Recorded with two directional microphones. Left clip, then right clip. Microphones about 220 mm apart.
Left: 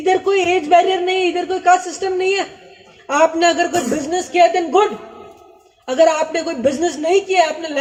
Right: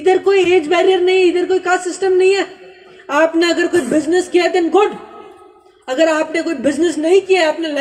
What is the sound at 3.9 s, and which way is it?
Speech, 50° right (ahead or behind).